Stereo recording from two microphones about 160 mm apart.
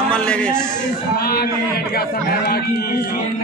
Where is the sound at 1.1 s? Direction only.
75° left (ahead or behind).